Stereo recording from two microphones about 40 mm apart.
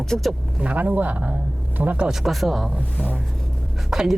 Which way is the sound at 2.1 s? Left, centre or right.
Centre.